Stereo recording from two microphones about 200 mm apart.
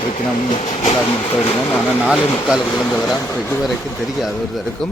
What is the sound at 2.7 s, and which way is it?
Speech, 5° left (ahead or behind).